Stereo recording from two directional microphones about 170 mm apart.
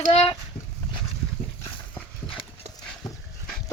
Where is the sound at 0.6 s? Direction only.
70° left (ahead or behind).